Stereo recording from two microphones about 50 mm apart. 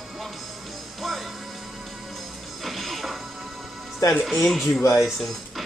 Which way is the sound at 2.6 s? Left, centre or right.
Centre.